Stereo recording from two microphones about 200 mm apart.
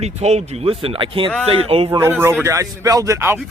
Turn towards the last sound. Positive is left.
turn(degrees=-15)  # may be behind; listen again after turning